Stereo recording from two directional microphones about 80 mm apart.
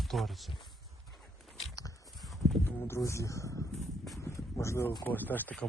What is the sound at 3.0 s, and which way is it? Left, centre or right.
Speech, left.